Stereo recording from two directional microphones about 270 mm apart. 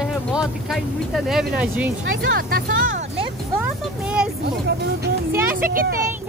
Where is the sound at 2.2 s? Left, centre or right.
Right.